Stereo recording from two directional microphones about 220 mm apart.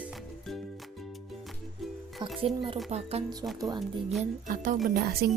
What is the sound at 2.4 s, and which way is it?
Speech, 25° right (ahead or behind).